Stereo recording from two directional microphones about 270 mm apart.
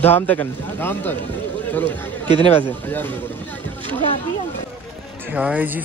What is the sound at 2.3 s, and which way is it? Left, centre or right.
Speech, left.